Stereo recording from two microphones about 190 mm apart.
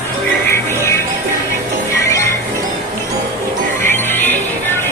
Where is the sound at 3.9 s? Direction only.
10° left (ahead or behind).